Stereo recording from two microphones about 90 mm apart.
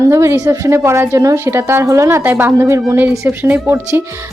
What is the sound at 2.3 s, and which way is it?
A woman's voice, 20° right (ahead or behind).